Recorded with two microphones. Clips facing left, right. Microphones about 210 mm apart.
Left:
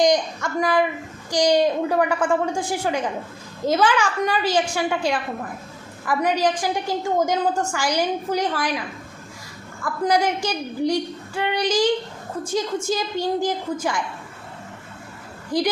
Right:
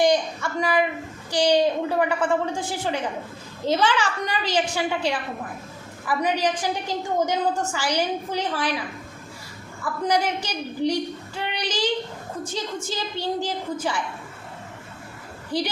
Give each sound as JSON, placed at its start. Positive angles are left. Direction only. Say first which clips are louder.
{"t": 0.0, "sound": "a woman's voice", "louder": "left 1 dB", "side_deg": 15}
{"t": 6.1, "sound": "a woman's voice", "louder": "left 3 dB", "side_deg": 10}
{"t": 9.8, "sound": "a woman's voice", "louder": "left 3 dB", "side_deg": 10}
{"t": 15.5, "sound": "a woman's voice", "louder": "left 3 dB", "side_deg": 10}